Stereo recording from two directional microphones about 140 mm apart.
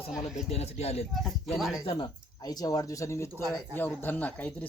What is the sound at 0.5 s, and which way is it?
Speech, 50° left (ahead or behind).